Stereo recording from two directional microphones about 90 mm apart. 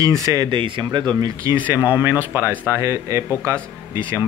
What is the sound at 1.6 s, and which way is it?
Speech, 20° right (ahead or behind).